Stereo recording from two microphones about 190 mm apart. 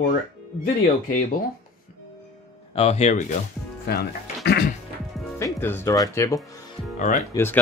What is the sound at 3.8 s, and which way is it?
Speech, 55° left (ahead or behind).